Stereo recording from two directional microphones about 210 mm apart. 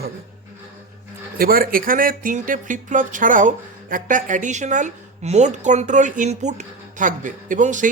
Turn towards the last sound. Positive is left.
turn(degrees=-35)  # may be behind; listen again after turning